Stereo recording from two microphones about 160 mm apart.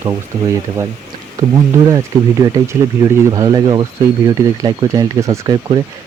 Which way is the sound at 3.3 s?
25° right (ahead or behind).